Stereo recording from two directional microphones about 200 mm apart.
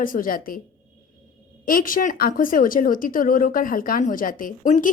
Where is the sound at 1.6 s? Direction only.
45° left (ahead or behind).